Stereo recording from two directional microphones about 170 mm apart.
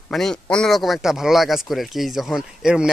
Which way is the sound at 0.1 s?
5° left (ahead or behind).